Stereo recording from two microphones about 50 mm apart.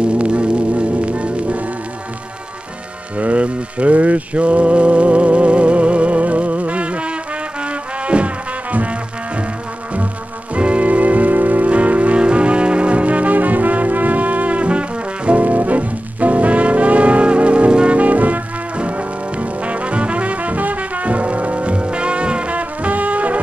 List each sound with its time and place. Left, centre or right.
0.0 s music: right
3.2 s music: right
10.5 s music: right